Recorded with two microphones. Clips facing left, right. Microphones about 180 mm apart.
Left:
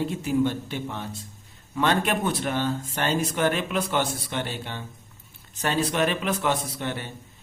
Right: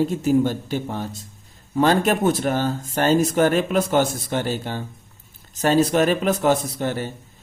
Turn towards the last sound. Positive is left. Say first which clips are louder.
# right 6 dB
turn(degrees=-40)  # may be behind; listen again after turning